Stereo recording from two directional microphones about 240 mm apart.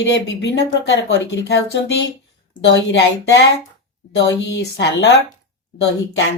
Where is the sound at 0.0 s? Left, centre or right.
Left.